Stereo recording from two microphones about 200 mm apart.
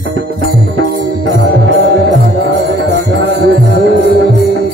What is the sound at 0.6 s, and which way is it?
Music, 55° right (ahead or behind).